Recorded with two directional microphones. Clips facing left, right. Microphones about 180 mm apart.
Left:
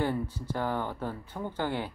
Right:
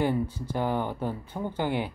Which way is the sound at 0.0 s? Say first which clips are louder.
Right 4 dB; 15° right (ahead or behind).